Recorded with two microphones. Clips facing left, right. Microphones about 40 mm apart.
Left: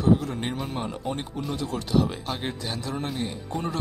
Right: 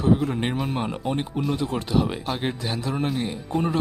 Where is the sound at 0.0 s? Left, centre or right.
Right.